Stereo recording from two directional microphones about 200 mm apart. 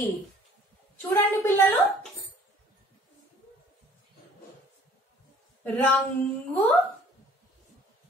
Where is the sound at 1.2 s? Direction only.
10° left (ahead or behind).